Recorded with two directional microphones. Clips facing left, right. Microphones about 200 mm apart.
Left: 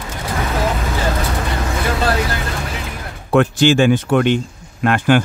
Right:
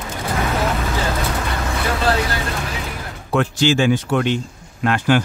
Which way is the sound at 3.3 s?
55° left (ahead or behind).